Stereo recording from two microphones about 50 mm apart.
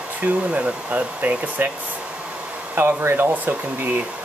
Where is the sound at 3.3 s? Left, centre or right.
Right.